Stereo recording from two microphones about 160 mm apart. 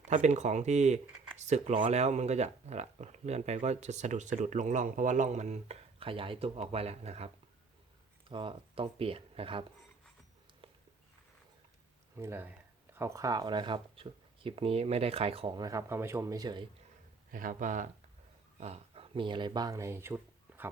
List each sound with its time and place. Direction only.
0.1 s speech: 50° right (ahead or behind)
8.3 s speech: 30° right (ahead or behind)
12.1 s speech: 15° right (ahead or behind)
17.3 s speech: 55° right (ahead or behind)
18.6 s speech: 40° right (ahead or behind); by 20.7 s 15° right (ahead or behind)